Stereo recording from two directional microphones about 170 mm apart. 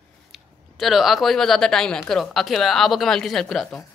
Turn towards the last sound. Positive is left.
turn(degrees=0)  # may be behind; listen again after turning